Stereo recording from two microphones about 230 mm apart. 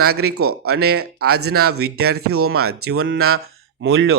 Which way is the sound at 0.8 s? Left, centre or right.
Right.